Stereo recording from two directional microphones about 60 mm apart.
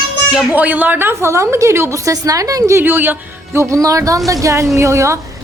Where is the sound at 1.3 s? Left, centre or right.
Right.